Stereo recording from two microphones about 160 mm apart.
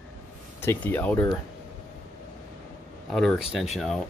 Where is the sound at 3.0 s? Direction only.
5° left (ahead or behind).